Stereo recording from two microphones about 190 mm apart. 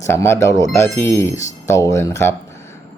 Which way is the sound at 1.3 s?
40° left (ahead or behind).